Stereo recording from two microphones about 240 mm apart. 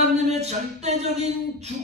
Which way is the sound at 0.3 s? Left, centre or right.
Right.